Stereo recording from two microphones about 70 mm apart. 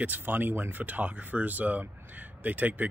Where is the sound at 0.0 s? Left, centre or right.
Right.